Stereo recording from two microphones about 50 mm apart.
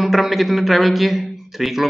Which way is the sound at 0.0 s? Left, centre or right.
Centre.